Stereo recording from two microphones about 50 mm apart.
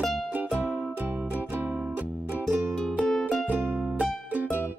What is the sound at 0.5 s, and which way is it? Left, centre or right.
Music, right.